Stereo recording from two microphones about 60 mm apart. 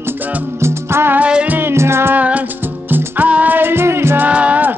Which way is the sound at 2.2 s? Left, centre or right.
Right.